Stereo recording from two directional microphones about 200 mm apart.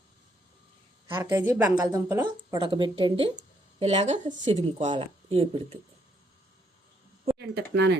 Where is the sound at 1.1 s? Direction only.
15° right (ahead or behind).